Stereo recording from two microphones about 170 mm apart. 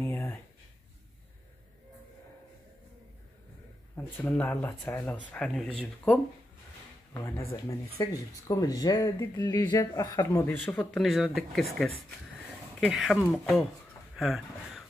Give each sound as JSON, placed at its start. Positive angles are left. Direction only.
{"t": 0.0, "sound": "a sound", "side_deg": 15}
{"t": 3.9, "sound": "speech", "side_deg": 10}
{"t": 7.5, "sound": "speech", "side_deg": 20}